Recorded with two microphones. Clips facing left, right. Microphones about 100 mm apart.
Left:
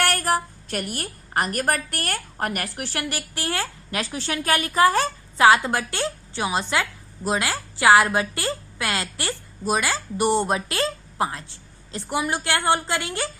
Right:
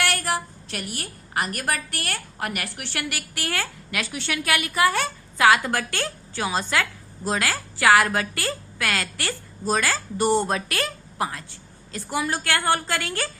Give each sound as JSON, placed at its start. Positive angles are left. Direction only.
{"t": 0.0, "sound": "a woman's voice", "side_deg": 40}